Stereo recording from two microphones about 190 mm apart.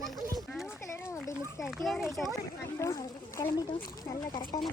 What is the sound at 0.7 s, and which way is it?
Children playing, 15° left (ahead or behind).